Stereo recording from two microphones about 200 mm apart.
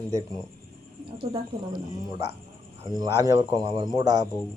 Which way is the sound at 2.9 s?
20° right (ahead or behind).